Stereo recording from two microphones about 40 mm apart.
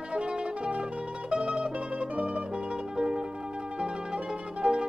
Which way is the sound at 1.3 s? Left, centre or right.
Right.